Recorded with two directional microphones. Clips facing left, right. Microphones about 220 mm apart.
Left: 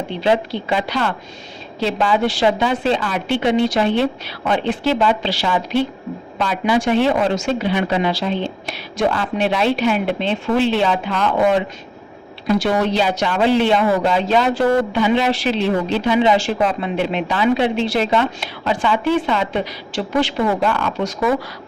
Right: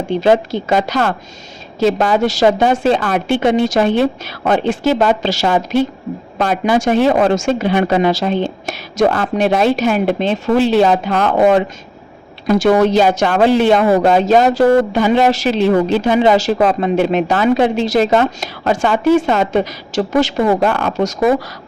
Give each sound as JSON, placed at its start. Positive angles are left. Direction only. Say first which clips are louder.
{"t": 0.1, "sound": "speech", "louder": "right 6 dB", "side_deg": -45}